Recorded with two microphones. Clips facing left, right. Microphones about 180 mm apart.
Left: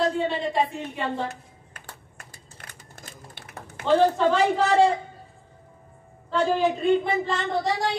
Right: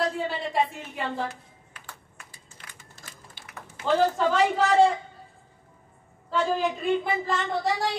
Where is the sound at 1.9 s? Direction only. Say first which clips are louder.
Left 1 dB; 45° left (ahead or behind).